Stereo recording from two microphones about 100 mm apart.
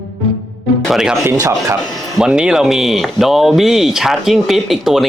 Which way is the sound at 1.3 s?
35° right (ahead or behind).